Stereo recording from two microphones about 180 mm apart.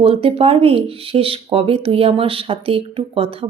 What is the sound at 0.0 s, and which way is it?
A woman's voice, 30° right (ahead or behind).